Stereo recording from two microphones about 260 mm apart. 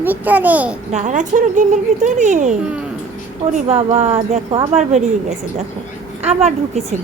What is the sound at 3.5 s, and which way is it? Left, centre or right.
Speech, right.